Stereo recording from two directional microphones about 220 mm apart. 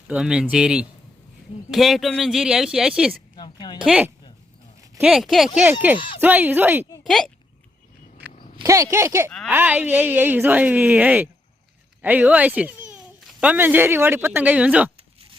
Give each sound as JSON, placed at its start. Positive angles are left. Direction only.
{"t": 0.1, "sound": "speech", "side_deg": -5}
{"t": 3.3, "sound": "a sound", "side_deg": 20}
{"t": 3.8, "sound": "speech", "side_deg": -5}
{"t": 7.0, "sound": "speech", "side_deg": 0}
{"t": 8.6, "sound": "speech", "side_deg": -15}